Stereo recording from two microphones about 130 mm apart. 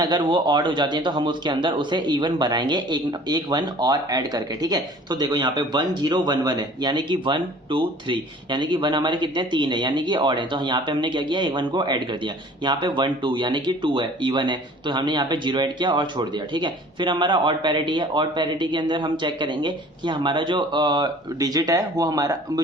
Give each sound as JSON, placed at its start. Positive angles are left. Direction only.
{"t": 0.0, "sound": "speech", "side_deg": -35}